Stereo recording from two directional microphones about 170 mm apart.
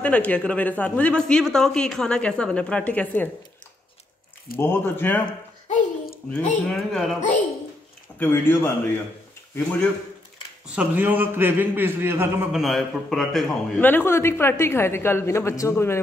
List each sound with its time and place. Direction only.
0.0 s a man's voice: 10° left (ahead or behind)
4.6 s a man's voice: 15° left (ahead or behind)
5.7 s a sound: 45° left (ahead or behind)
6.3 s a woman's voice: 5° left (ahead or behind)
8.2 s a man's voice: 10° left (ahead or behind)
10.7 s a man's voice: 10° right (ahead or behind)
12.5 s a man's voice: centre (ahead or behind); by 16.0 s 15° left (ahead or behind)